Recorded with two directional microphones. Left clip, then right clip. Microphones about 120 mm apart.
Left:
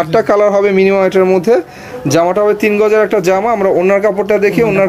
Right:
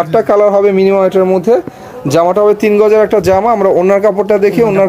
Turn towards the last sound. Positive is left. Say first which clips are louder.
# right 2 dB
turn(degrees=-30)  # may be behind; listen again after turning